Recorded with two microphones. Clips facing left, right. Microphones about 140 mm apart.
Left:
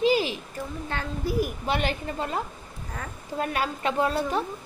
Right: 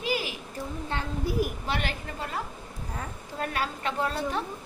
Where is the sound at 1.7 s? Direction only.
20° left (ahead or behind).